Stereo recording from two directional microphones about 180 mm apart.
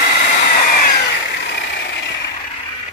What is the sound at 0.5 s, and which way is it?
Vehicle, 50° left (ahead or behind).